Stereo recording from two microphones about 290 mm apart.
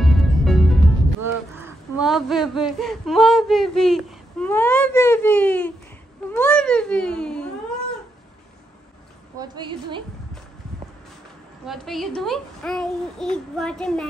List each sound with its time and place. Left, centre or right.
0.0 s music: centre
1.2 s speech: centre
9.4 s a woman's voice: centre
11.6 s a child's voice: centre